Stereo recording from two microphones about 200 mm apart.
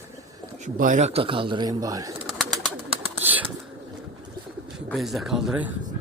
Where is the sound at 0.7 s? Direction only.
40° right (ahead or behind); by 2.1 s 15° right (ahead or behind).